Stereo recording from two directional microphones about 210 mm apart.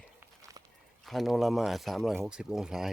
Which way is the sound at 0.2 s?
15° right (ahead or behind).